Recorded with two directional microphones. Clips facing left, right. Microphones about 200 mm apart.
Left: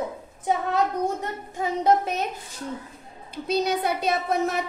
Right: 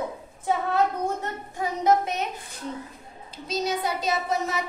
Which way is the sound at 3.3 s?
60° left (ahead or behind).